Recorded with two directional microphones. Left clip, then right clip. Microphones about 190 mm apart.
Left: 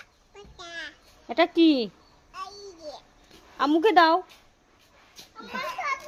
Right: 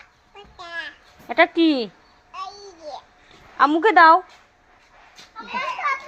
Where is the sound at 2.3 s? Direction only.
30° left (ahead or behind).